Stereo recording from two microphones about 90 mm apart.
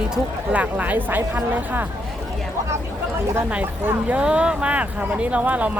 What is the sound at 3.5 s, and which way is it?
Speech, 20° right (ahead or behind).